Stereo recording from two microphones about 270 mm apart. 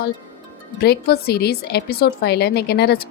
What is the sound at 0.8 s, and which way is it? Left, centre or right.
A woman's voice, left.